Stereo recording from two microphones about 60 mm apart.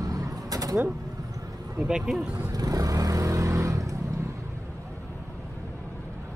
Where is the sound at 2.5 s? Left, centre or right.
Right.